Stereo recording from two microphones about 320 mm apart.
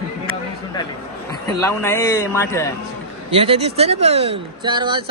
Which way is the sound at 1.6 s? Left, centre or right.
Centre.